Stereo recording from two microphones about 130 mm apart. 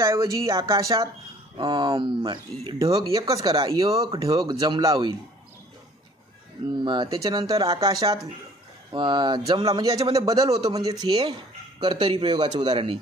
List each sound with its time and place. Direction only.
0.0 s speech: 25° right (ahead or behind)
6.7 s speech: 35° right (ahead or behind)